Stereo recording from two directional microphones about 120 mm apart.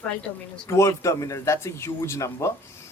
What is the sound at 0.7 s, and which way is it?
Speech, 25° left (ahead or behind).